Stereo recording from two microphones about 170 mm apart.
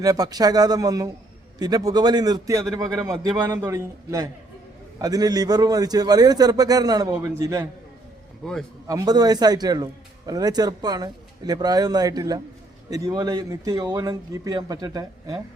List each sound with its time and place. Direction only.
0.0 s a man's voice: 20° right (ahead or behind)
8.9 s a man's voice: 20° right (ahead or behind)